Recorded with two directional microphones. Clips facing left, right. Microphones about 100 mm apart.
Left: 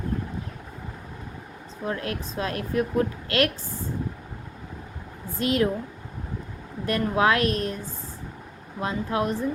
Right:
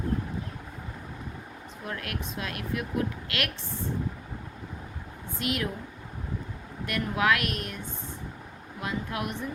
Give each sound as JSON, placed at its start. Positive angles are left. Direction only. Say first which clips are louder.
{"t": 1.8, "sound": "speech", "louder": "left 6 dB", "side_deg": 30}
{"t": 5.4, "sound": "speech", "louder": "left 8 dB", "side_deg": 35}
{"t": 6.8, "sound": "speech", "louder": "left 4 dB", "side_deg": 35}
{"t": 8.8, "sound": "speech", "louder": "left 6 dB", "side_deg": 30}